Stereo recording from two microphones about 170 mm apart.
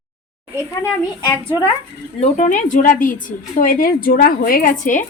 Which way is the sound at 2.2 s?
45° left (ahead or behind).